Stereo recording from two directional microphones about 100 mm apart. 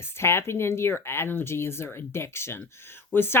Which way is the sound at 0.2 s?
25° left (ahead or behind).